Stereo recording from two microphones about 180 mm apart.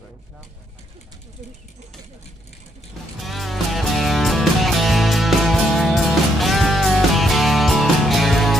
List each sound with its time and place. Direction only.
3.2 s music: centre (ahead or behind)